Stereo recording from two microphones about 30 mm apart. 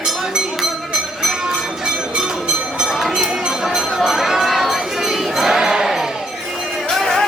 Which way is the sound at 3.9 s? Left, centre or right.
Centre.